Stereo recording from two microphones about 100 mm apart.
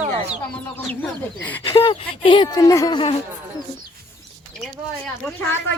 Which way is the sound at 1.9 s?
55° left (ahead or behind).